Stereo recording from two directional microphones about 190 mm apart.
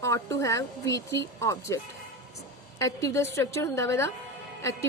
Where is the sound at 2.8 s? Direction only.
15° left (ahead or behind).